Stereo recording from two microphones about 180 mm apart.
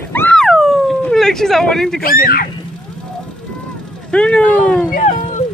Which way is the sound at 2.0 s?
55° left (ahead or behind).